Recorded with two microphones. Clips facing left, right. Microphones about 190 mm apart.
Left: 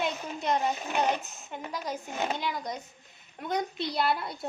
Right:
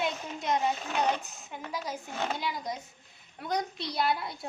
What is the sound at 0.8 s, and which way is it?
Speech, 10° left (ahead or behind).